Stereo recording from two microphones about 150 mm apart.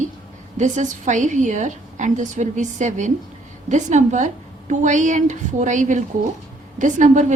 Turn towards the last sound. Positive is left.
turn(degrees=-55)  # may be behind; listen again after turning